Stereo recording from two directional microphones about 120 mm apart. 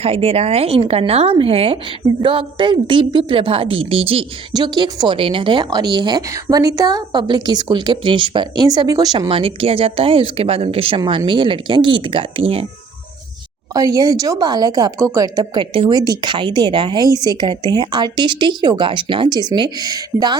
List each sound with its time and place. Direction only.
0.0 s a woman's voice: 55° right (ahead or behind)
4.5 s speech: 35° right (ahead or behind)
9.3 s a woman's voice: 50° right (ahead or behind)
13.7 s speech: 30° right (ahead or behind)